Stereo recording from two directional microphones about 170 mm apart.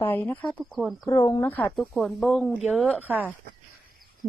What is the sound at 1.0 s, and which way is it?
Speech, 20° left (ahead or behind).